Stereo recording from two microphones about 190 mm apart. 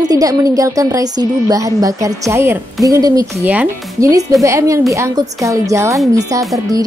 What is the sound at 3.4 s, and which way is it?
Speech, 10° right (ahead or behind).